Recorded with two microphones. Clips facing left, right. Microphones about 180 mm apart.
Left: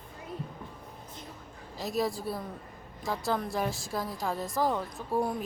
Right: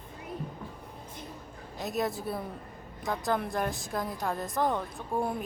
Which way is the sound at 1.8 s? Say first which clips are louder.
Left 1 dB; centre (ahead or behind).